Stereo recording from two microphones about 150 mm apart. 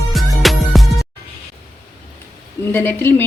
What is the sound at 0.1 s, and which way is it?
Music, centre (ahead or behind).